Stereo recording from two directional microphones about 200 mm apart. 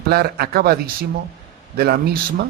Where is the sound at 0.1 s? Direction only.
50° right (ahead or behind).